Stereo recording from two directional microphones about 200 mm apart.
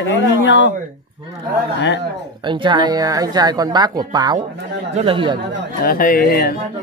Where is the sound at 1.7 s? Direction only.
65° left (ahead or behind).